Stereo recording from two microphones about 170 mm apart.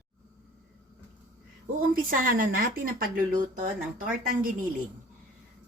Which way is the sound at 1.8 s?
55° right (ahead or behind).